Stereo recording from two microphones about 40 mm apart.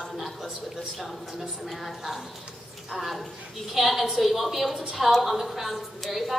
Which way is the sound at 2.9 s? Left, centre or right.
Centre.